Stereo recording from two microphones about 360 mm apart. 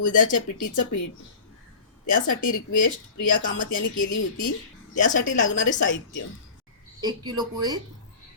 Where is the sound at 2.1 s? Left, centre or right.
Left.